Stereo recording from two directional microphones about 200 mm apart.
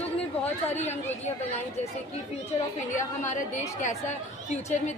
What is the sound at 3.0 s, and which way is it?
Speech, 35° left (ahead or behind).